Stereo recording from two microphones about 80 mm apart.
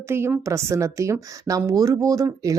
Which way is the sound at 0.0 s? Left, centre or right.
Right.